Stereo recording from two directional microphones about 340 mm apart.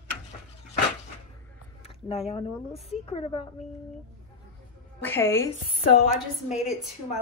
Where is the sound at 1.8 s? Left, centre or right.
Centre.